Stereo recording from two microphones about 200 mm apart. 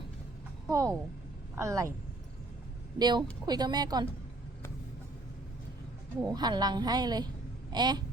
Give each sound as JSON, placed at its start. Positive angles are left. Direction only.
{"t": 0.7, "sound": "speech", "side_deg": -15}
{"t": 3.0, "sound": "a woman's voice", "side_deg": -20}
{"t": 6.3, "sound": "a woman's voice", "side_deg": -20}